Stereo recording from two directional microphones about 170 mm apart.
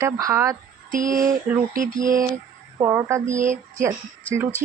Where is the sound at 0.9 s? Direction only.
50° right (ahead or behind).